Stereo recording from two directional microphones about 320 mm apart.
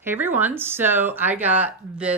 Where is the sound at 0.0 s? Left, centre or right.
Centre.